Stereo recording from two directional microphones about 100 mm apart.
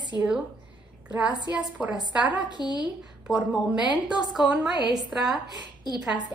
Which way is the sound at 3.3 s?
10° right (ahead or behind).